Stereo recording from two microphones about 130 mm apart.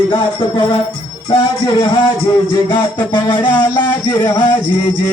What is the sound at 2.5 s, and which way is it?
Speech, 35° left (ahead or behind).